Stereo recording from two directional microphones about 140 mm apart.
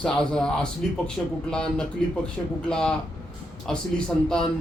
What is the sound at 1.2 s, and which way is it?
Speech, 20° left (ahead or behind).